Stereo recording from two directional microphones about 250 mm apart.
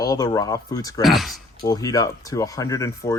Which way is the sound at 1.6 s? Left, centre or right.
Centre.